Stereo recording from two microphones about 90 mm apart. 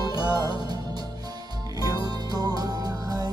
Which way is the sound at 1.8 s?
45° right (ahead or behind).